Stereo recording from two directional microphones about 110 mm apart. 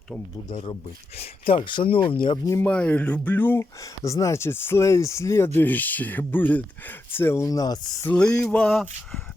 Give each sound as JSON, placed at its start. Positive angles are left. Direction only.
{"t": 1.1, "sound": "speech", "side_deg": 60}
{"t": 2.6, "sound": "speech", "side_deg": 10}
{"t": 3.8, "sound": "speech", "side_deg": 30}
{"t": 8.1, "sound": "speech", "side_deg": 10}